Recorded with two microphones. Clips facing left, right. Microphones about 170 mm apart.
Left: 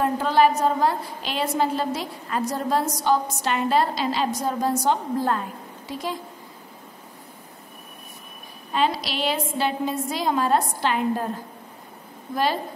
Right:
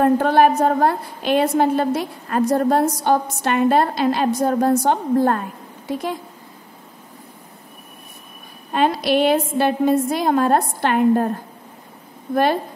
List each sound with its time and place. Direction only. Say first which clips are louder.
0.0 s a woman's voice: right 5 dB; 55° right (ahead or behind)
8.7 s a woman's voice: right 7 dB; 55° right (ahead or behind)